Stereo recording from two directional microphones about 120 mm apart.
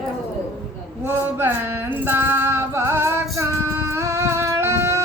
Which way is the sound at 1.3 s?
15° right (ahead or behind).